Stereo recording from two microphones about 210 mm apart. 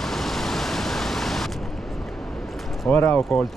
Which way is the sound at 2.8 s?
10° left (ahead or behind).